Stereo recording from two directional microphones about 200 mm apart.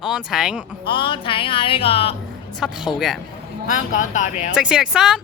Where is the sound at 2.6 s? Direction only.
5° right (ahead or behind).